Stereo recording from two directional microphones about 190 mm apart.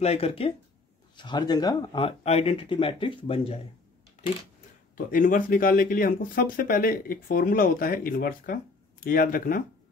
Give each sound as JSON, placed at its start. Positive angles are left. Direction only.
{"t": 0.0, "sound": "speech", "side_deg": 30}
{"t": 4.9, "sound": "speech", "side_deg": 45}